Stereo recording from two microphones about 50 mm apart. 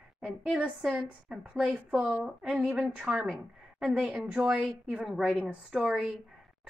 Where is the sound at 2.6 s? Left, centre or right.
Right.